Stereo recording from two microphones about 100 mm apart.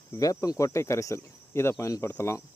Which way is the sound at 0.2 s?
35° left (ahead or behind).